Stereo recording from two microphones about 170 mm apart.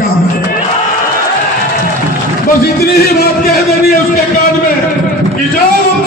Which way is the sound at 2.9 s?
65° left (ahead or behind).